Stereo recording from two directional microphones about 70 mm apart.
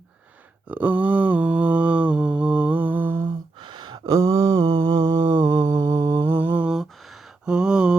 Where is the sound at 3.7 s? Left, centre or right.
Right.